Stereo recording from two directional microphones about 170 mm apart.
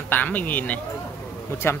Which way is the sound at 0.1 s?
10° left (ahead or behind).